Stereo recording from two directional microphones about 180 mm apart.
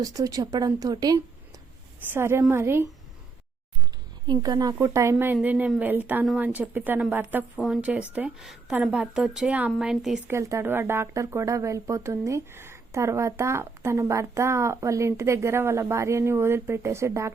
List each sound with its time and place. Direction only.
0.0 s speech: 20° right (ahead or behind)
4.3 s a woman's voice: 20° right (ahead or behind); by 10.3 s 5° right (ahead or behind)
10.3 s speech: 15° right (ahead or behind)